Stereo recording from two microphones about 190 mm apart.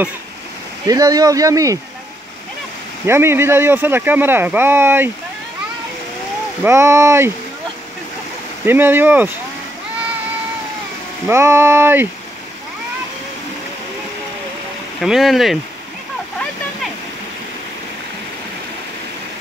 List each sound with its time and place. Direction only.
0.8 s speech: 20° right (ahead or behind)
3.1 s speech: 15° right (ahead or behind)
6.6 s speech: 15° right (ahead or behind)
8.6 s speech: 10° right (ahead or behind)
11.2 s speech: 15° right (ahead or behind)
15.0 s speech: centre (ahead or behind)